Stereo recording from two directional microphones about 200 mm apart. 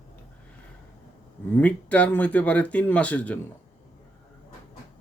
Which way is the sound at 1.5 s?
5° left (ahead or behind).